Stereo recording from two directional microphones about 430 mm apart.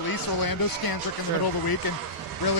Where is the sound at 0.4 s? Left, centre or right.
Left.